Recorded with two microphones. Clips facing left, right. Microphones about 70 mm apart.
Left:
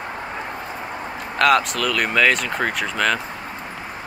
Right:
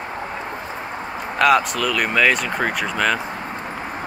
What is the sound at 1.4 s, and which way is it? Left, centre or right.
Speech, centre.